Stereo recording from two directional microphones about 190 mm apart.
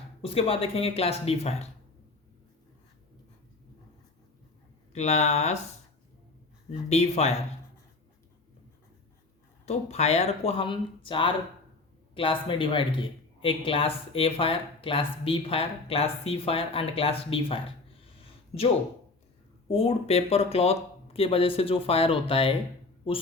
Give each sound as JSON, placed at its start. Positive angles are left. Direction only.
{"t": 0.2, "sound": "speech", "side_deg": 30}
{"t": 4.9, "sound": "speech", "side_deg": 35}
{"t": 6.7, "sound": "speech", "side_deg": 35}
{"t": 9.6, "sound": "speech", "side_deg": 35}
{"t": 19.6, "sound": "speech", "side_deg": 30}